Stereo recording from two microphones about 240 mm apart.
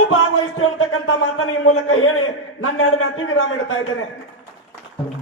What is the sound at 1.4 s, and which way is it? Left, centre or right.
A man's voice, left.